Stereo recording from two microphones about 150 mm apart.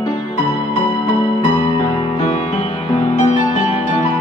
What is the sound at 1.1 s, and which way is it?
Music, 35° left (ahead or behind).